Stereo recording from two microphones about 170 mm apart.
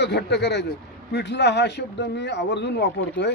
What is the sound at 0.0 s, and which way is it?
Speech, 85° left.